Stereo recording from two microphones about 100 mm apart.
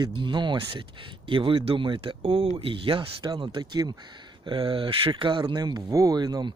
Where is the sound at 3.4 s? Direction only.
45° right (ahead or behind).